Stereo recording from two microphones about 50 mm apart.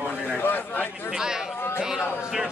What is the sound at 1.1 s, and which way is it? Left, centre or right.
Speech, centre.